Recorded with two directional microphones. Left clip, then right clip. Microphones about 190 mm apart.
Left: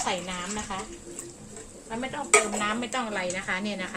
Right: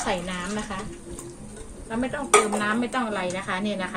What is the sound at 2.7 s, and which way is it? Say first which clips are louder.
Speech: right 4 dB; 35° left (ahead or behind).